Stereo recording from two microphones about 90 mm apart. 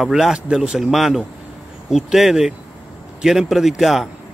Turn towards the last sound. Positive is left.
turn(degrees=0)  # may be behind; listen again after turning